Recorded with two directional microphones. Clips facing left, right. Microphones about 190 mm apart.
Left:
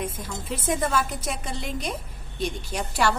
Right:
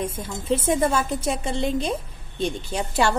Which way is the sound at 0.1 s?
25° right (ahead or behind).